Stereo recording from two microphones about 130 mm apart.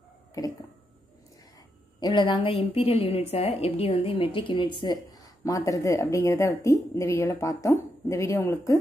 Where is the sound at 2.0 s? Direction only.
35° left (ahead or behind).